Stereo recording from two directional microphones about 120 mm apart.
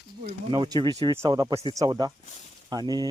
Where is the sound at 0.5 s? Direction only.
40° right (ahead or behind).